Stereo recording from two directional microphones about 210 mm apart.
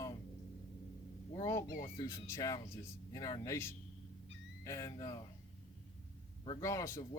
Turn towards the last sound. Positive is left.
turn(degrees=15)  # may be behind; listen again after turning